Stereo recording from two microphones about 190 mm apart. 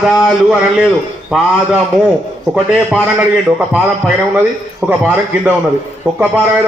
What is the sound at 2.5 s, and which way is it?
A man's voice, 5° right (ahead or behind).